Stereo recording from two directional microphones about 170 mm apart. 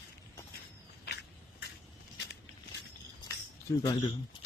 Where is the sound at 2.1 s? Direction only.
90° left.